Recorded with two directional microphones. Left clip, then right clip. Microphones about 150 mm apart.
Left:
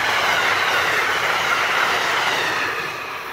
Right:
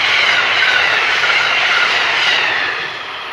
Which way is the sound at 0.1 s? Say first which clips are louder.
Right 5 dB; 85° left.